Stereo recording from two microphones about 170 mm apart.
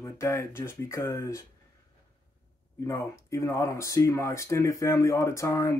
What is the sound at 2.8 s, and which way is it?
Speech, 15° left (ahead or behind).